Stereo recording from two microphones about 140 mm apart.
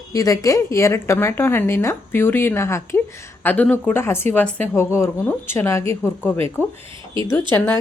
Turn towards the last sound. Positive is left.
turn(degrees=10)  # may be behind; listen again after turning